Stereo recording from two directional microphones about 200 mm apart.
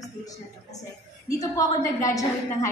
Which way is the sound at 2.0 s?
15° left (ahead or behind).